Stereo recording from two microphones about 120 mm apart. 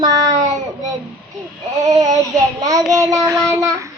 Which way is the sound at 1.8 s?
30° right (ahead or behind).